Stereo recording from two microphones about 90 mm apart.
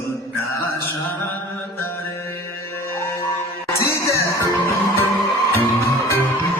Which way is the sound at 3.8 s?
30° left (ahead or behind).